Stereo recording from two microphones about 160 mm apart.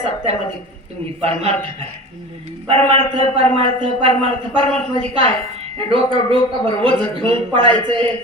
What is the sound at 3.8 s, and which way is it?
Speech, 30° right (ahead or behind).